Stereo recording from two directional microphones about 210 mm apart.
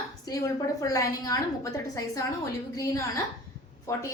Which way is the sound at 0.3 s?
15° left (ahead or behind).